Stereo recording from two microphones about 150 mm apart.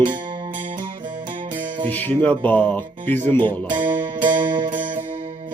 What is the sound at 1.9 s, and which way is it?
Speech, 10° left (ahead or behind).